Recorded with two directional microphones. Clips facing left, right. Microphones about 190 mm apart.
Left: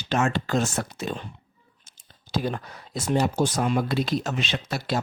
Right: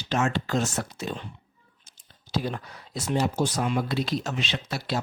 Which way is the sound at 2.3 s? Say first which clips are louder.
Left 2 dB; 50° left (ahead or behind).